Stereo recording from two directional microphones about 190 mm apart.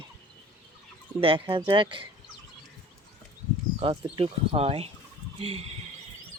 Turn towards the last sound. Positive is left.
turn(degrees=-30)  # may be behind; listen again after turning